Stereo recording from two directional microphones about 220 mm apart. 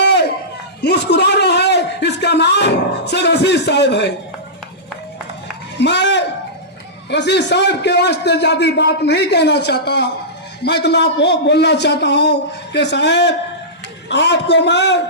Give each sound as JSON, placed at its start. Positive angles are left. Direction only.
{"t": 0.0, "sound": "a sound", "side_deg": 50}
{"t": 0.8, "sound": "a man's voice", "side_deg": 50}
{"t": 5.8, "sound": "a man's voice", "side_deg": 50}